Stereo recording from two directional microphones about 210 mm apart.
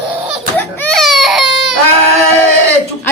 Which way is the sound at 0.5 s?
10° left (ahead or behind).